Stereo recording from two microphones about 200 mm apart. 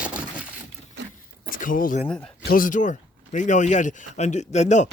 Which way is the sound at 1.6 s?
45° left (ahead or behind).